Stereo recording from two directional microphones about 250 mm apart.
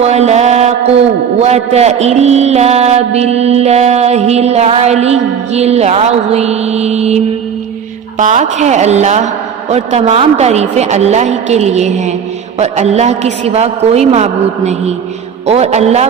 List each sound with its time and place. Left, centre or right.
0.0 s a man's voice: right
8.2 s a man's voice: right